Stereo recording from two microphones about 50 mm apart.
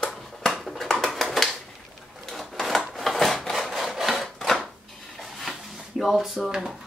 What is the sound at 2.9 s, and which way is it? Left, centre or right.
Wood, centre.